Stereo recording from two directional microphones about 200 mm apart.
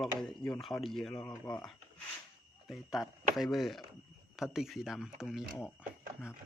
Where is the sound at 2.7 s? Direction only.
Centre (ahead or behind).